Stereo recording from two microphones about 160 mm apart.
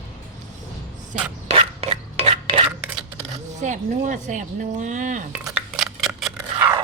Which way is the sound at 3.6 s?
50° right (ahead or behind).